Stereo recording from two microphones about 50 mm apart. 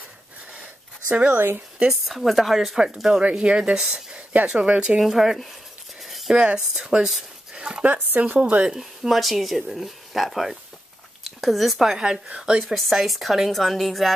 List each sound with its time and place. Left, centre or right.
1.3 s speech: right
1.9 s speech: centre
2.8 s speech: centre
4.3 s speech: right
5.0 s speech: centre
5.4 s a sound: centre
6.3 s speech: centre
7.5 s dog: centre
7.8 s speech: right
8.7 s speech: centre
12.7 s speech: centre